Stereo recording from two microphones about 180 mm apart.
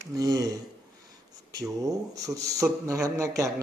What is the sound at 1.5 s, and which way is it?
Speech, 20° right (ahead or behind).